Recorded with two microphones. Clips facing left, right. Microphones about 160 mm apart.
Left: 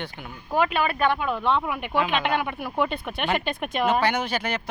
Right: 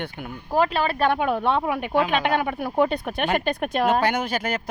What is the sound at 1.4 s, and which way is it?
Speech, 50° right (ahead or behind).